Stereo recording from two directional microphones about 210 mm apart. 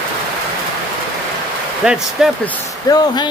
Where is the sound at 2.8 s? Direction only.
20° left (ahead or behind).